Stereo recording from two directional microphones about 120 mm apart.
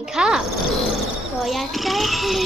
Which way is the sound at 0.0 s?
5° right (ahead or behind).